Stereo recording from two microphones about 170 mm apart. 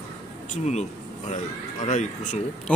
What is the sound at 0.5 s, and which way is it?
Speech, 45° left (ahead or behind).